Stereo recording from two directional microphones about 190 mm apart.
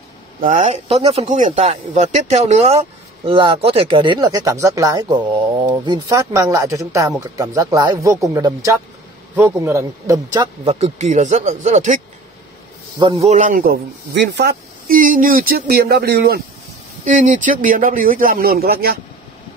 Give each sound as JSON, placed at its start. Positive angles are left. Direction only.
{"t": 0.4, "sound": "speech", "side_deg": -40}
{"t": 10.6, "sound": "speech", "side_deg": -30}
{"t": 13.0, "sound": "speech", "side_deg": -35}
{"t": 14.1, "sound": "speech", "side_deg": -60}
{"t": 17.0, "sound": "speech", "side_deg": -40}